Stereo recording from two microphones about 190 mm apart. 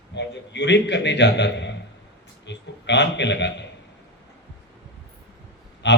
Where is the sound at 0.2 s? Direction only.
65° left (ahead or behind).